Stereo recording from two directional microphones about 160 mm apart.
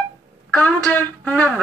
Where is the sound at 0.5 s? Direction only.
5° left (ahead or behind).